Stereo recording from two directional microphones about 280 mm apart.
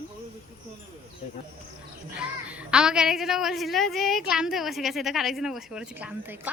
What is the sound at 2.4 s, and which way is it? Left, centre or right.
A woman's voice, centre.